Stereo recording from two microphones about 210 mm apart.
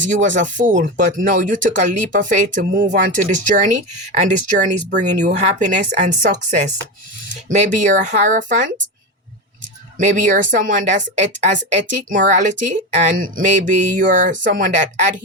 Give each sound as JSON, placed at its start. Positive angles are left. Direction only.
{"t": 0.0, "sound": "speech", "side_deg": -35}
{"t": 2.6, "sound": "speech", "side_deg": -55}
{"t": 2.9, "sound": "speech", "side_deg": -40}
{"t": 10.0, "sound": "speech", "side_deg": -40}